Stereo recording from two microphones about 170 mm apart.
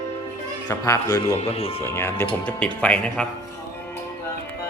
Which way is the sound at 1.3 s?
35° left (ahead or behind).